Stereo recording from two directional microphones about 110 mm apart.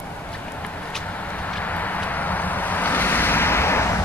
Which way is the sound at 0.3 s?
10° left (ahead or behind).